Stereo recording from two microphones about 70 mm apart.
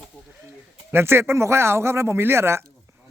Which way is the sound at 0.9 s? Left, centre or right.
Right.